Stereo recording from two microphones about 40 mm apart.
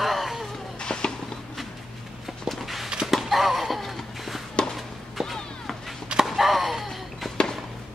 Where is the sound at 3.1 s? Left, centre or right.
Centre.